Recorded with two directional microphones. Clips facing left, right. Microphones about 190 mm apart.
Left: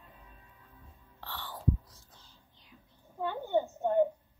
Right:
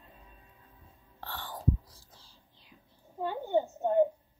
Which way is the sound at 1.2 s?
45° right (ahead or behind).